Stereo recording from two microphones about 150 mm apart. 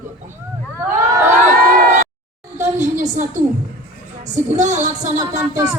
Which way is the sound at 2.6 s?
55° right (ahead or behind).